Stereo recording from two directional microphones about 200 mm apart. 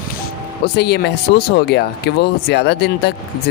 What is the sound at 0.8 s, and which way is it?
Speech, 55° left (ahead or behind).